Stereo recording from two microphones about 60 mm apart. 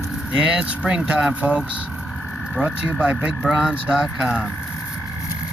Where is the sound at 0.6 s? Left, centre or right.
Centre.